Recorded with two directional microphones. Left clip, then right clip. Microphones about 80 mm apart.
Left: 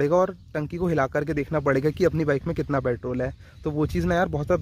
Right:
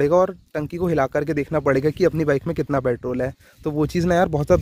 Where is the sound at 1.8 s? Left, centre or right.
Right.